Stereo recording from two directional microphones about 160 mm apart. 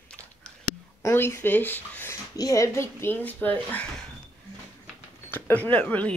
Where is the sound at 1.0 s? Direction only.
15° left (ahead or behind).